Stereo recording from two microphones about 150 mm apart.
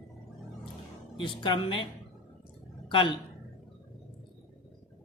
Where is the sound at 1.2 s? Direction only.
35° left (ahead or behind).